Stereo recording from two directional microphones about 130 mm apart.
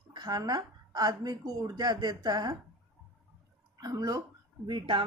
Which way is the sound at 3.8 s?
30° right (ahead or behind).